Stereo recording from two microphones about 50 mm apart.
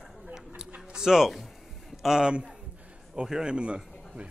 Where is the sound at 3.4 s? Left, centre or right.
Right.